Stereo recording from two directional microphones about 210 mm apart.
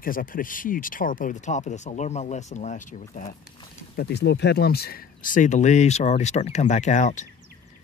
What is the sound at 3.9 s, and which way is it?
Speech, 50° left (ahead or behind).